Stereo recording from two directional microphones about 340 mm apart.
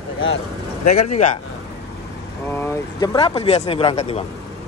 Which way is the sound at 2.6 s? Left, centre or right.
Centre.